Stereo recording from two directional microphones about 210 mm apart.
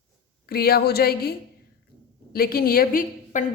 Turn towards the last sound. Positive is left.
turn(degrees=40)  # may be behind; listen again after turning